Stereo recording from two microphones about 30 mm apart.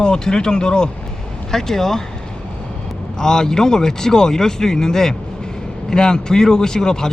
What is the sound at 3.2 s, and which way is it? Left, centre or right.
Speech, centre.